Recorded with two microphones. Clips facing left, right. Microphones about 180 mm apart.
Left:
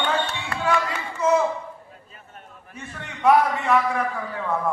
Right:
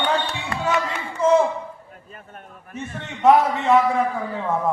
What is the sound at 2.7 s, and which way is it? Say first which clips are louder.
A man's voice: right 6 dB; 25° right (ahead or behind).